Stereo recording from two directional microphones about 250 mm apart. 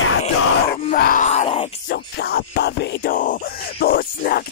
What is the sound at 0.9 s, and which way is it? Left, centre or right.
Groan, left.